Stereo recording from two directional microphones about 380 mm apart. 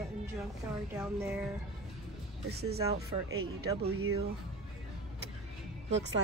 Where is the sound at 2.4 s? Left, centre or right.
Right.